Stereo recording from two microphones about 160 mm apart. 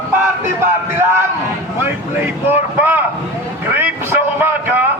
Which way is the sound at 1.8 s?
15° right (ahead or behind).